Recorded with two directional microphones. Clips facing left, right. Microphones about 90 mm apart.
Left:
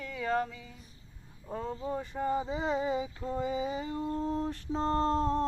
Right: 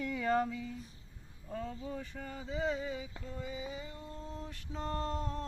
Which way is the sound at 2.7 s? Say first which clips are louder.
Left 8 dB; 60° left (ahead or behind).